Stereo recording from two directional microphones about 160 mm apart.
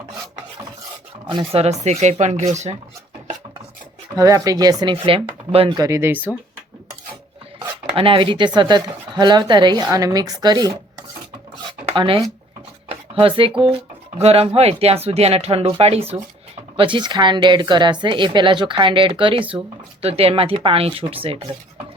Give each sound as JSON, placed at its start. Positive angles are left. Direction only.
{"t": 1.3, "sound": "speech", "side_deg": -35}
{"t": 4.2, "sound": "speech", "side_deg": -20}
{"t": 4.9, "sound": "speech", "side_deg": -35}
{"t": 5.7, "sound": "speech", "side_deg": -20}
{"t": 7.9, "sound": "speech", "side_deg": -35}
{"t": 11.9, "sound": "speech", "side_deg": -35}
{"t": 12.9, "sound": "dishes", "side_deg": -35}
{"t": 14.2, "sound": "speech", "side_deg": -40}